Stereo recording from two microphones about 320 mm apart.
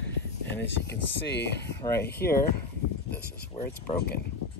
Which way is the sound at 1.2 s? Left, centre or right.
Left.